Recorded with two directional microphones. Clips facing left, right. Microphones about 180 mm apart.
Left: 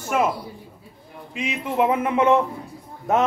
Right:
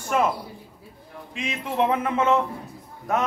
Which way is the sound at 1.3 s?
5° left (ahead or behind).